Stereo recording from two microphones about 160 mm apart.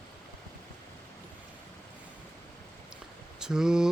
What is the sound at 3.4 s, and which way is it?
Speech, 5° right (ahead or behind).